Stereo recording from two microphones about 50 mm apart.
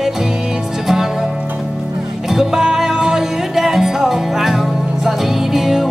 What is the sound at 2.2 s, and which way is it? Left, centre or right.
Music, centre.